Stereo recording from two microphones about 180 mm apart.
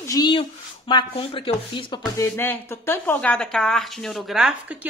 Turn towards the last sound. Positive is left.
turn(degrees=-5)  # may be behind; listen again after turning